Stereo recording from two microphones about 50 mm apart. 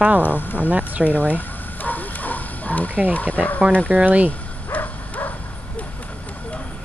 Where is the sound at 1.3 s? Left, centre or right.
Left.